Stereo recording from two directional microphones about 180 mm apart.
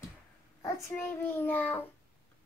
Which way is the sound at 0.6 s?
15° left (ahead or behind).